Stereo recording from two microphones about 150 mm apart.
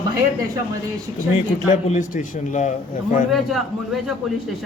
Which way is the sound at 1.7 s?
55° left (ahead or behind).